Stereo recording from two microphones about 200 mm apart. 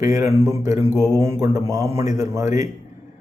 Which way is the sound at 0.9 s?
20° left (ahead or behind).